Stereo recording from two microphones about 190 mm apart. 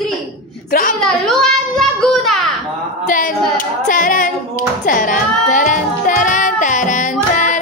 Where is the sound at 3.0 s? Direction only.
45° left (ahead or behind).